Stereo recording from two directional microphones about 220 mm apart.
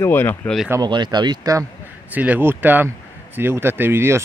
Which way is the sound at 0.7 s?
20° right (ahead or behind).